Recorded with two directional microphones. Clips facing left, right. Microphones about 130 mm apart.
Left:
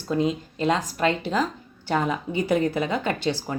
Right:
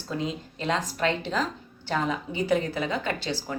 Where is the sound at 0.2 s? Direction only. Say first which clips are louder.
Left 7 dB; 15° left (ahead or behind).